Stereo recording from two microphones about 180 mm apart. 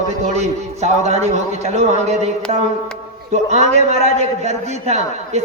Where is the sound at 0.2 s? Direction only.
40° right (ahead or behind).